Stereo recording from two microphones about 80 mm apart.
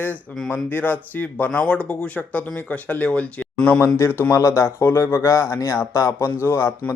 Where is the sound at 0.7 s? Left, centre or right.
Left.